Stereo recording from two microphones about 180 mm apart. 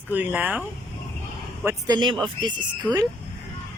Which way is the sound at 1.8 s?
25° right (ahead or behind).